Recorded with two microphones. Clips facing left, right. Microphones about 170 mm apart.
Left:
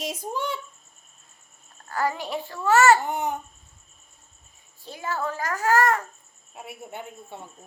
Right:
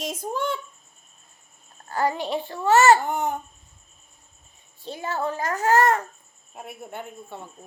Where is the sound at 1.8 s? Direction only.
25° right (ahead or behind).